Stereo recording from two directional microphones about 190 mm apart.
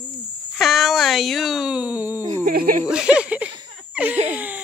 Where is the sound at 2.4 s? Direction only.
45° right (ahead or behind).